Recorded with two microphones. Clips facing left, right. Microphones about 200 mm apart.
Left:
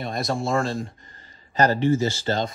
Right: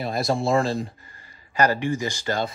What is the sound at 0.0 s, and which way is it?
Speech, centre (ahead or behind).